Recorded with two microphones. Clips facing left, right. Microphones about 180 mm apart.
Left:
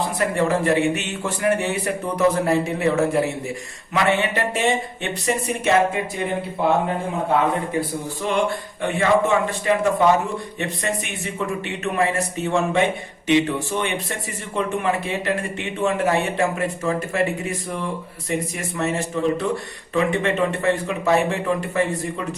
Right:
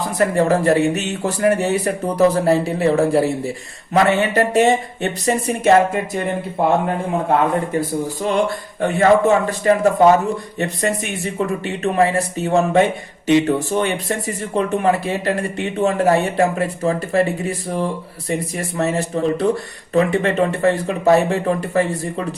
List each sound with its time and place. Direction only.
0.2 s a man's voice: 40° right (ahead or behind)
8.3 s speech: 40° right (ahead or behind)